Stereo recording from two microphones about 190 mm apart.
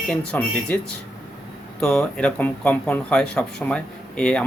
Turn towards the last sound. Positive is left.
turn(degrees=5)  # may be behind; listen again after turning